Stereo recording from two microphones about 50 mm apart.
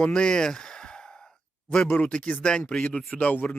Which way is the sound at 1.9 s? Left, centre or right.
Left.